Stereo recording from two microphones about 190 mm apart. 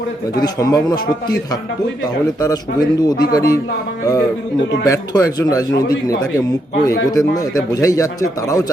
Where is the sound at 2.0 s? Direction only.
20° left (ahead or behind).